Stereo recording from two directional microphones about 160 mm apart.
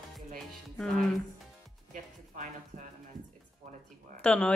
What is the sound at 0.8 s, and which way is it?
Speech, 5° left (ahead or behind).